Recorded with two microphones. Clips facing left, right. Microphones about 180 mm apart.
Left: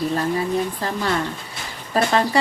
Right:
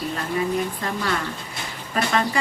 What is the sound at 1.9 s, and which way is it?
Speech, 35° left (ahead or behind).